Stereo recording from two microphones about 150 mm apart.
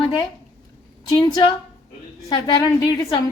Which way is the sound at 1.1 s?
25° left (ahead or behind).